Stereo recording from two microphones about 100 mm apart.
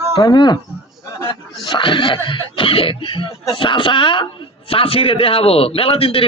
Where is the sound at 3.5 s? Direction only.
60° left (ahead or behind).